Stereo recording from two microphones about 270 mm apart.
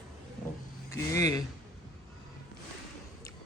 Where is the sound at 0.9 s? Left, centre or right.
Centre.